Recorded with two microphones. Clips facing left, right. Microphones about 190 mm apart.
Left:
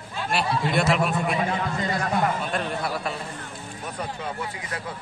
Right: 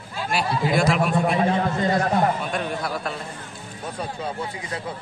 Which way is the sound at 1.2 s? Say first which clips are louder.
Right 5 dB; 40° right (ahead or behind).